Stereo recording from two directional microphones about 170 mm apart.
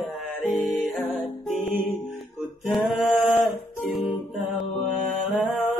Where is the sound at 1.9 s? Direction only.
Centre (ahead or behind).